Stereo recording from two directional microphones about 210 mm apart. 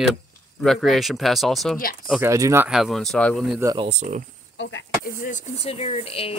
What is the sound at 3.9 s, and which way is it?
Speech, 35° right (ahead or behind).